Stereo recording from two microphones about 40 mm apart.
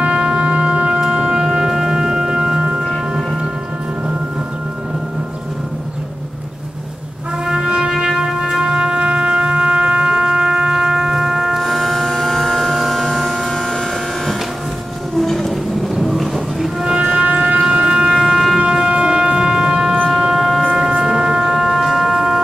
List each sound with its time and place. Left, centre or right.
0.2 s wind instrument: right
1.0 s music: centre
2.9 s music: centre
7.4 s music: centre
8.6 s music: right
11.6 s a sound: centre
15.1 s music: centre
16.8 s music: centre
17.6 s siren: right
18.2 s siren: centre
18.7 s music: right
20.1 s shofar: centre
20.7 s shofar: centre